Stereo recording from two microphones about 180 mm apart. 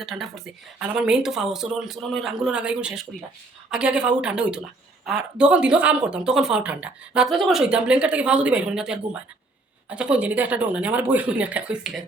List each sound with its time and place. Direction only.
0.0 s speech: centre (ahead or behind)